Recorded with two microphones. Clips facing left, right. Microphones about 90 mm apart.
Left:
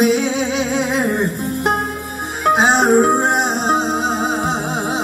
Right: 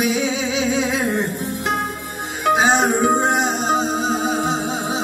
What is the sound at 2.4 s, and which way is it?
Music, 50° left (ahead or behind).